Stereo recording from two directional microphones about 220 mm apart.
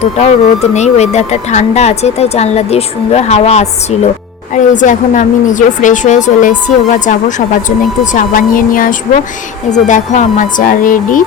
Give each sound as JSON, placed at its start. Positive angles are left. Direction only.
{"t": 0.0, "sound": "a woman's voice", "side_deg": 30}